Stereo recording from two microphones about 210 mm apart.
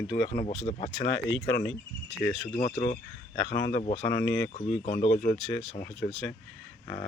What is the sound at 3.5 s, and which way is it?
Speech, 55° left (ahead or behind).